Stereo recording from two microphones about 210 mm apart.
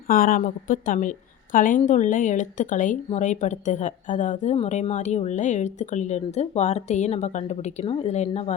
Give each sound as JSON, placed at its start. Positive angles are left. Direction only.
{"t": 0.1, "sound": "a woman's voice", "side_deg": 40}